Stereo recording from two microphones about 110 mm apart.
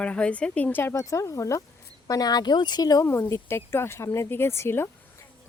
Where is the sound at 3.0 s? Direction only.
25° left (ahead or behind).